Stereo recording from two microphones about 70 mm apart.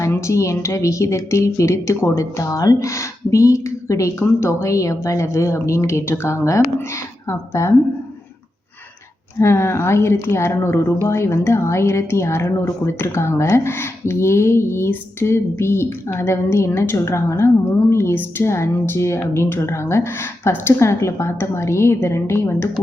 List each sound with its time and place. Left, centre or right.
0.1 s speech: left
9.4 s speech: left